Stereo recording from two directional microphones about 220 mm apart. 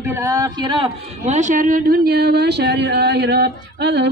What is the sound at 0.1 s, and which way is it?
A man's voice, 15° right (ahead or behind).